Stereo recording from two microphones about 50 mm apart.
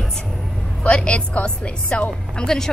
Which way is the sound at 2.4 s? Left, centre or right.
Centre.